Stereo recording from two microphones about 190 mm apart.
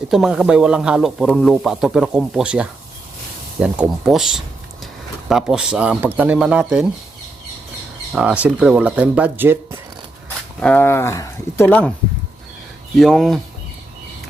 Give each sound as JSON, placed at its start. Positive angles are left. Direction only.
{"t": 0.1, "sound": "speech", "side_deg": 0}
{"t": 8.1, "sound": "speech", "side_deg": -5}
{"t": 10.6, "sound": "speech", "side_deg": 5}
{"t": 13.0, "sound": "speech", "side_deg": 0}